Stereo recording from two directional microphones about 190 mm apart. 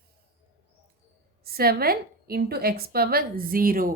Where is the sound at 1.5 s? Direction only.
55° right (ahead or behind).